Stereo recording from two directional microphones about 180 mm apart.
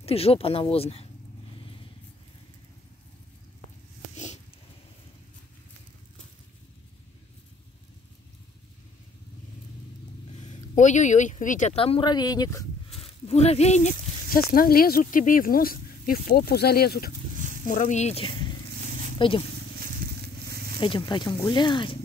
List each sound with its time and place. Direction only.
0.0 s speech: 35° left (ahead or behind)
4.1 s a sound: 40° left (ahead or behind)
10.4 s speech: 40° left (ahead or behind); by 12.6 s 20° left (ahead or behind)
13.0 s speech: 35° left (ahead or behind); by 17.1 s 60° left (ahead or behind)
17.6 s speech: 45° left (ahead or behind)
20.4 s a sound: 60° right (ahead or behind)
20.8 s speech: 25° left (ahead or behind)